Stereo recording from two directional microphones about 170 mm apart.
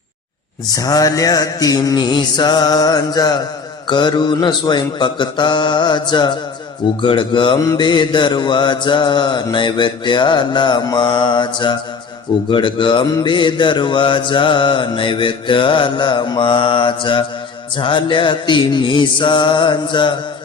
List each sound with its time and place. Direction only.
0.7 s mantra: 20° left (ahead or behind)